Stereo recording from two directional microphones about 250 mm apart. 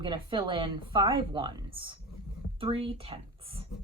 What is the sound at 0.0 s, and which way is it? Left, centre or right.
A woman's voice, centre.